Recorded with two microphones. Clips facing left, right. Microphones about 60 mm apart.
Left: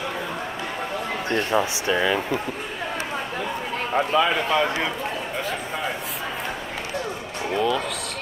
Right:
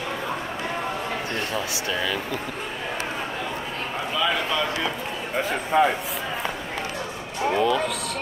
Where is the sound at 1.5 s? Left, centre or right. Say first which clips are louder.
Left 5 dB; left.